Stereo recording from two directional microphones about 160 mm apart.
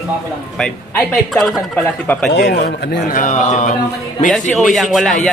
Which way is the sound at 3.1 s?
50° left (ahead or behind).